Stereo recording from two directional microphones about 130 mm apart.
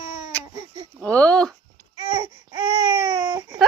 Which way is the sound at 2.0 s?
45° right (ahead or behind).